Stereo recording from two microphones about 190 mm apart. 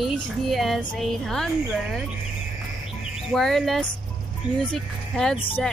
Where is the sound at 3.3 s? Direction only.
Centre (ahead or behind).